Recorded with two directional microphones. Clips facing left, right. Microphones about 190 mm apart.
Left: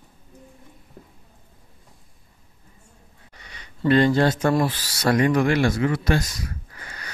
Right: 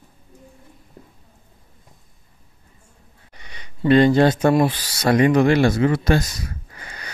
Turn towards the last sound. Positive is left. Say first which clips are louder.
# right 2 dB
turn(degrees=-20)  # may be behind; listen again after turning